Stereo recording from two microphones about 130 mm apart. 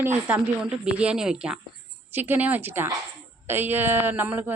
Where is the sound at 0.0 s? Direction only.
15° right (ahead or behind).